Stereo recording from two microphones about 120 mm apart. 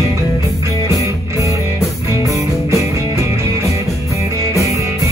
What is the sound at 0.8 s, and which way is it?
Music, 25° right (ahead or behind).